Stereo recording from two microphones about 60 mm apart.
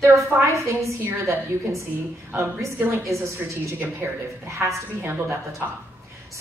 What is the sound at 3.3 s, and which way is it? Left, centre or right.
Speech, right.